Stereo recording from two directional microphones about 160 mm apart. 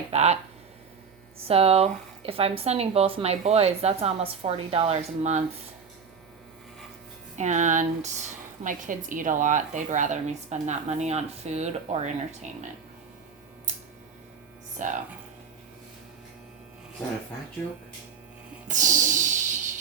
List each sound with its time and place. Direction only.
0.1 s speech: 45° right (ahead or behind)
1.4 s speech: 35° right (ahead or behind)
7.3 s speech: 50° right (ahead or behind)
14.8 s speech: 50° right (ahead or behind)
18.7 s a sound: 50° right (ahead or behind)